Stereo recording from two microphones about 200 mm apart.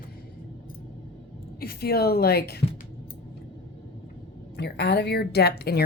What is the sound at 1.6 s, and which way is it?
A woman's voice, 50° left (ahead or behind).